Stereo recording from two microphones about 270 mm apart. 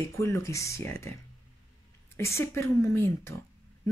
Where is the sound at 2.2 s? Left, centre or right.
Centre.